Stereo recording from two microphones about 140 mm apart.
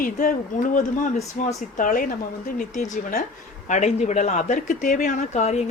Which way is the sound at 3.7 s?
55° left (ahead or behind).